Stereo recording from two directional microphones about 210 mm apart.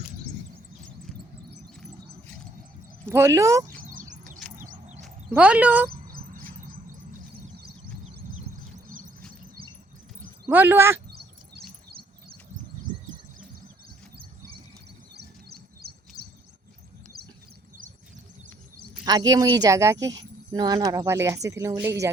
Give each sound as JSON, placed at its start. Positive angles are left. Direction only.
{"t": 1.8, "sound": "a sound", "side_deg": 5}
{"t": 3.1, "sound": "speech", "side_deg": -15}
{"t": 3.7, "sound": "a sound", "side_deg": -40}
{"t": 5.3, "sound": "speech", "side_deg": -5}
{"t": 10.5, "sound": "speech", "side_deg": -10}
{"t": 15.8, "sound": "bird vocalization", "side_deg": -50}
{"t": 19.3, "sound": "speech", "side_deg": -15}